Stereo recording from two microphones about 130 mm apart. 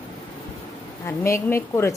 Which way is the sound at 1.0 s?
20° left (ahead or behind).